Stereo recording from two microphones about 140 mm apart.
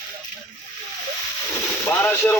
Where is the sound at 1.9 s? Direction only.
15° left (ahead or behind).